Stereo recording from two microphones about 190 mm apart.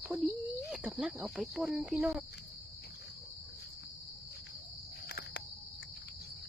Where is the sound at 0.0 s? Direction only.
Centre (ahead or behind).